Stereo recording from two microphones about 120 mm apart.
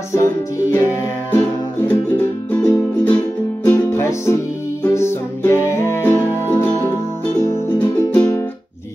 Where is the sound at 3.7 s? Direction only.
20° left (ahead or behind).